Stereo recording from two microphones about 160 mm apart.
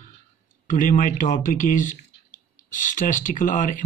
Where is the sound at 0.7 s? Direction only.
55° left (ahead or behind).